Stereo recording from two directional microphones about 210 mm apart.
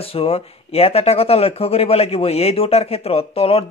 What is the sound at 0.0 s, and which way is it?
Speech, 25° left (ahead or behind).